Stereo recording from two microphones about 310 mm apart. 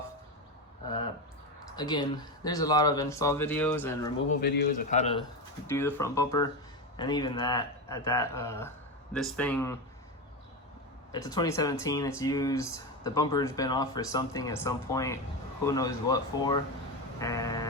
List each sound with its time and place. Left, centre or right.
1.7 s speech: centre
4.3 s speech: left
5.6 s speech: centre
11.1 s speech: centre